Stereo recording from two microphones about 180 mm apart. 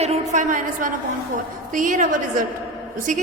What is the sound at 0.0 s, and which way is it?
A woman's voice, 40° right (ahead or behind).